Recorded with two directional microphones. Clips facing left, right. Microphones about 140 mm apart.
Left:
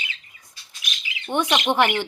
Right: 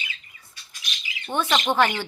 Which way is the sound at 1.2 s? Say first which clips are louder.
Left 2 dB; 15° left (ahead or behind).